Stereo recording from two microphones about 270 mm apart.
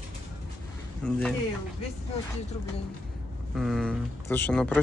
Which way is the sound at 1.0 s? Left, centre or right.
Centre.